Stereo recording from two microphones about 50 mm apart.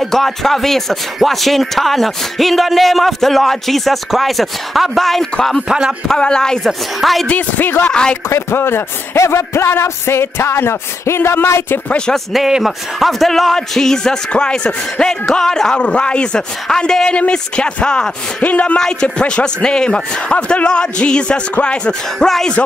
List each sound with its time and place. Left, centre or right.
0.0 s speech: centre
5.7 s speech: centre
6.0 s a man's voice: centre
7.0 s speech: centre
7.2 s speech: left
7.9 s a man's voice: centre
8.3 s speech: left
9.2 s speech: left
12.4 s speech: centre
13.0 s a man's voice: centre
15.8 s a man's voice: left
18.4 s a man's voice: left
18.8 s a man's voice: centre